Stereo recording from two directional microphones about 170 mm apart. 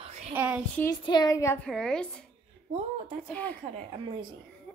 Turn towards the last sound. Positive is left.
turn(degrees=10)  # may be behind; listen again after turning